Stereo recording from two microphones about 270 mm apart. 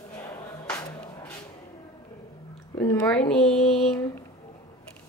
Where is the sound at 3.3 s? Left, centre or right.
Centre.